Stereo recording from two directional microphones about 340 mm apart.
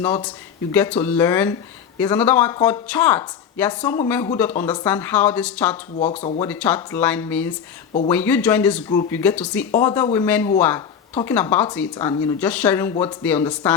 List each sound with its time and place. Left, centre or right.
0.0 s speech: centre
6.0 s speech: centre
6.4 s speech: centre